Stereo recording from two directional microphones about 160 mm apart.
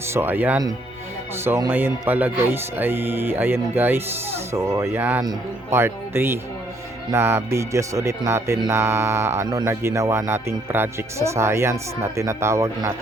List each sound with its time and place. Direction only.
0.1 s speech: 15° right (ahead or behind)